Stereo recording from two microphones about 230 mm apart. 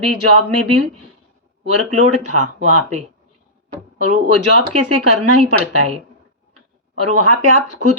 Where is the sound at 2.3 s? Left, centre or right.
Right.